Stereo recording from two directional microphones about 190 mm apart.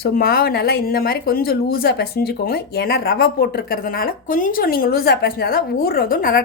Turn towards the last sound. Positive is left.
turn(degrees=50)  # may be behind; listen again after turning